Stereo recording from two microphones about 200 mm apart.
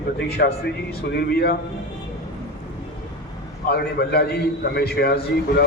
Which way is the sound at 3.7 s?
55° left (ahead or behind).